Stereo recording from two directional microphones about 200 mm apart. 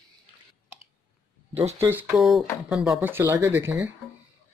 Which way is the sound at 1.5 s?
30° right (ahead or behind).